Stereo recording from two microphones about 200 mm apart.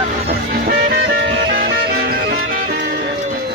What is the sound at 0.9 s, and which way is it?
Music, 45° right (ahead or behind).